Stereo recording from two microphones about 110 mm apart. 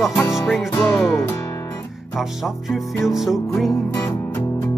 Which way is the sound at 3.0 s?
5° right (ahead or behind).